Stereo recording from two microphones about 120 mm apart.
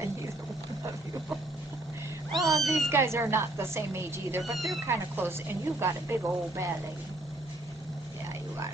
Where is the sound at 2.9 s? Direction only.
20° right (ahead or behind).